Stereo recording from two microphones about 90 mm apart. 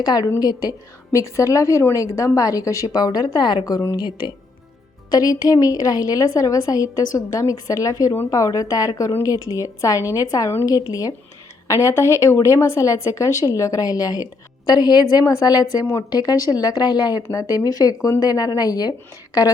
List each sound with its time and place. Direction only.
0.0 s a woman's voice: 50° left (ahead or behind)
3.9 s speech: 55° left (ahead or behind)
5.1 s a woman's voice: 45° left (ahead or behind)